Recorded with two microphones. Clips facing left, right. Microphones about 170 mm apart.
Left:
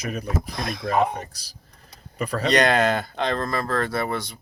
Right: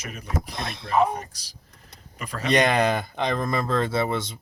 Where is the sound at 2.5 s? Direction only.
20° right (ahead or behind).